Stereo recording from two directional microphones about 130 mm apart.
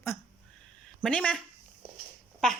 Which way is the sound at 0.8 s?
5° left (ahead or behind).